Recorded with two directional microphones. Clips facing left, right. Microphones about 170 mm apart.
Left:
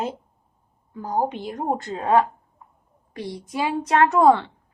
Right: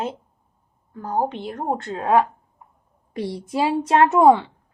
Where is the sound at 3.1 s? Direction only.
25° right (ahead or behind).